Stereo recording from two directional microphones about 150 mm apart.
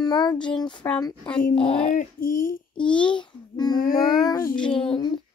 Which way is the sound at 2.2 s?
70° left (ahead or behind).